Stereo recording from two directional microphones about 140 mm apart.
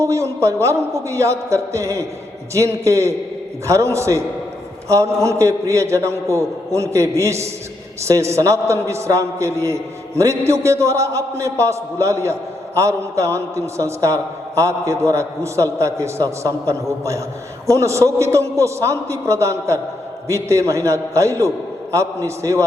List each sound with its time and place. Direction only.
0.0 s a man's voice: 20° right (ahead or behind)